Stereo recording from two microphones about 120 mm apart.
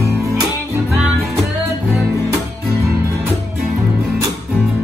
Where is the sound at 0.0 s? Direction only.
25° right (ahead or behind).